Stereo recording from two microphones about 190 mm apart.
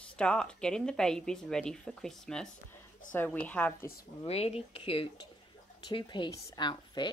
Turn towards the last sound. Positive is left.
turn(degrees=25)  # may be behind; listen again after turning